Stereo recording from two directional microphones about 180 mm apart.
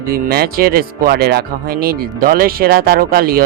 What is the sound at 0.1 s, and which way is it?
Speech, 55° right (ahead or behind).